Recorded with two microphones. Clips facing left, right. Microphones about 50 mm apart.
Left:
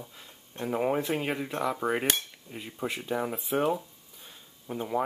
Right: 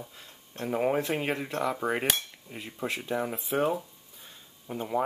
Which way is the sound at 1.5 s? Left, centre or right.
Centre.